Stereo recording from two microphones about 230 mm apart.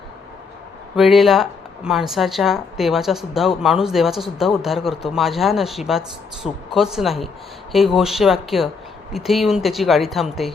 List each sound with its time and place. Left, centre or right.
0.9 s a man's voice: centre